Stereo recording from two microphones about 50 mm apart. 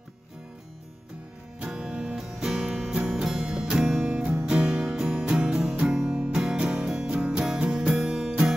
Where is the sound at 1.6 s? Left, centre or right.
Centre.